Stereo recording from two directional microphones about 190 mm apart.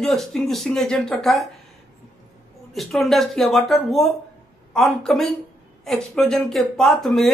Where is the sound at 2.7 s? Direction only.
Centre (ahead or behind).